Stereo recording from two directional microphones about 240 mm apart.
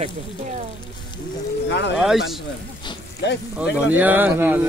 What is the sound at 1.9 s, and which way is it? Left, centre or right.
Speech, centre.